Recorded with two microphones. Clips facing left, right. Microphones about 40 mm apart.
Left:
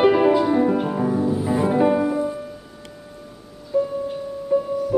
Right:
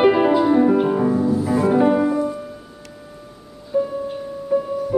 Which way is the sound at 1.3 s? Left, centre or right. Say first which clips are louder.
Right 2 dB; centre.